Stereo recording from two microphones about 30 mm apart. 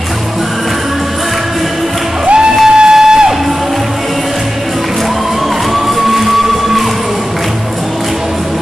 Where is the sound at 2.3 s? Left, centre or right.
Right.